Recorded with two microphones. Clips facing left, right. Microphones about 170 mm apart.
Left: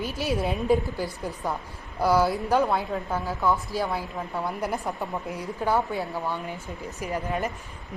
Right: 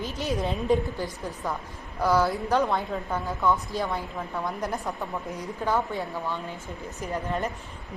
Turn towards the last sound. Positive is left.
turn(degrees=5)  # may be behind; listen again after turning